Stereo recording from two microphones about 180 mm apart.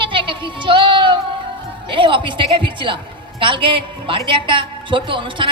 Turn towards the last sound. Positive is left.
turn(degrees=-30)  # may be behind; listen again after turning